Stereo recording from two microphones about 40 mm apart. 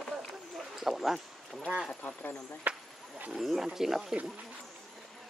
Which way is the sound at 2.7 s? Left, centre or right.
Right.